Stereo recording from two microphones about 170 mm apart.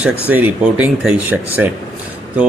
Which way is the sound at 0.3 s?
10° right (ahead or behind).